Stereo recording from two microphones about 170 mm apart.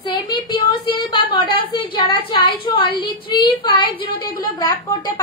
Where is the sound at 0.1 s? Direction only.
25° left (ahead or behind).